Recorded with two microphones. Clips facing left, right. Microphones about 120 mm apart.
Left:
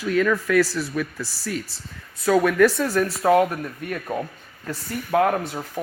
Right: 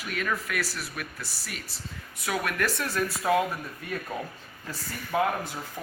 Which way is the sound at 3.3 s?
65° left (ahead or behind).